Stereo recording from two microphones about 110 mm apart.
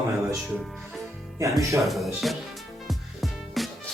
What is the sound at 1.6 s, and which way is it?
Music, 30° right (ahead or behind).